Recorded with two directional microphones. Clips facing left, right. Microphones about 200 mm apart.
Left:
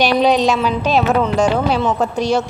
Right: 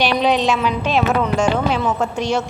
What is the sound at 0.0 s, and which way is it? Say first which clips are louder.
A woman's voice: left 3 dB; 40° left (ahead or behind).